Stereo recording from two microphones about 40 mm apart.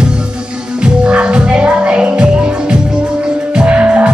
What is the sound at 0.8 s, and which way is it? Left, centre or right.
Music, right.